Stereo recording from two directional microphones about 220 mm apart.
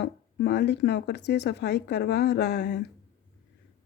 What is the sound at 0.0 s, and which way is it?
Speech, 50° left (ahead or behind).